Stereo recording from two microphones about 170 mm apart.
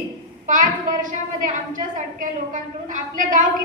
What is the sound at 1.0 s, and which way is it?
A woman's voice, 50° right (ahead or behind).